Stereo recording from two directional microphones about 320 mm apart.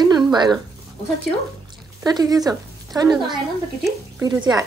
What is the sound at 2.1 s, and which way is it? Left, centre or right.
A woman's voice, centre.